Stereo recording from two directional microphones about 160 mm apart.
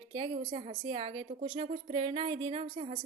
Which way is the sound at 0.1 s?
35° right (ahead or behind).